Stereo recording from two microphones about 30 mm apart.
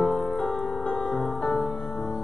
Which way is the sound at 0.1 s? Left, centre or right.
Left.